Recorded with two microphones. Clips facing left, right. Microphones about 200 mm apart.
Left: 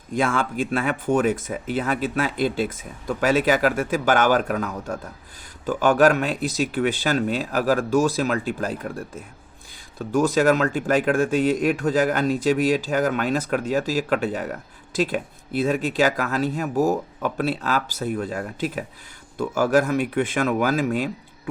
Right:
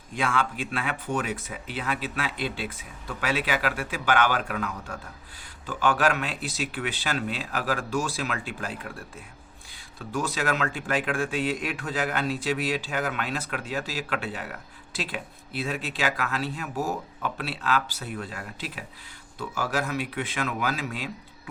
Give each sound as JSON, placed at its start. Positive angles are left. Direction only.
{"t": 0.1, "sound": "speech", "side_deg": 45}